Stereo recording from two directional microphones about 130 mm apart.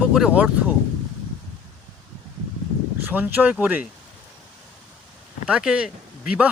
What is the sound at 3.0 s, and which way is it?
Speech, 15° right (ahead or behind).